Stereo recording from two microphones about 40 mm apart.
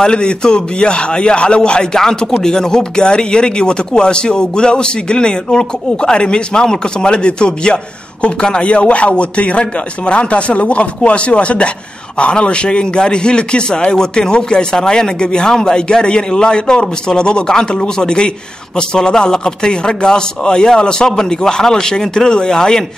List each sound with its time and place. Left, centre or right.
0.0 s a man's voice: left